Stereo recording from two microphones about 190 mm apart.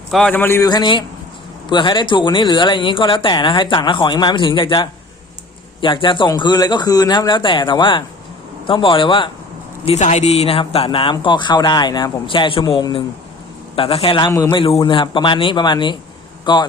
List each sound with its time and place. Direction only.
0.1 s a man's voice: 5° left (ahead or behind); by 16.6 s 25° left (ahead or behind)